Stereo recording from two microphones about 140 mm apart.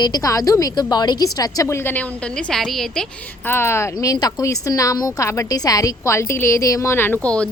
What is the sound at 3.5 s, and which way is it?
A woman's voice, 15° left (ahead or behind).